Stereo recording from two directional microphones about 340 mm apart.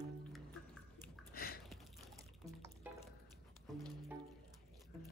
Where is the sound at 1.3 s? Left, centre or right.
Left.